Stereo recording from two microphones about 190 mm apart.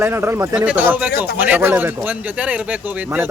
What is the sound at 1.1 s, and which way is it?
Speech, 55° left (ahead or behind).